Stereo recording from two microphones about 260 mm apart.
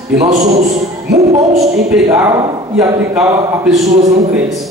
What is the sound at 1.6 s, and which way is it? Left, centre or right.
A man's voice, centre.